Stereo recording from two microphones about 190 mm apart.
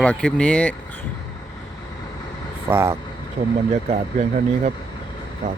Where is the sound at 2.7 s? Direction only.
15° right (ahead or behind).